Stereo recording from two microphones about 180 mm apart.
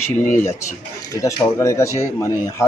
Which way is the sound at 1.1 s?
20° left (ahead or behind).